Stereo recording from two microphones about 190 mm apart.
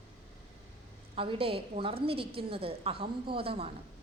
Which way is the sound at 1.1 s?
30° right (ahead or behind).